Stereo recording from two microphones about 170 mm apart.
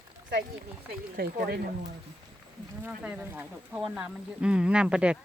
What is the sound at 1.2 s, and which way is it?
Speech, 65° right (ahead or behind).